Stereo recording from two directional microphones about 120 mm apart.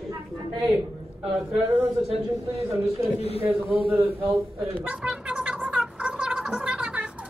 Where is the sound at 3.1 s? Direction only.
60° left (ahead or behind).